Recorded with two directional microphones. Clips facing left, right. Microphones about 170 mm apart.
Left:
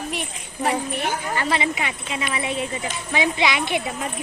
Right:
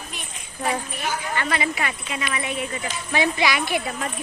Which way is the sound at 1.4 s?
25° left (ahead or behind).